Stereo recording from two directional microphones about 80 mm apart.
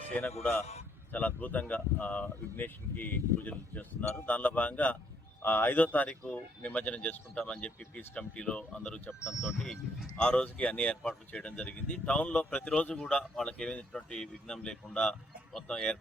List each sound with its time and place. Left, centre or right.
0.1 s speech: left
9.2 s speech: centre
10.2 s speech: centre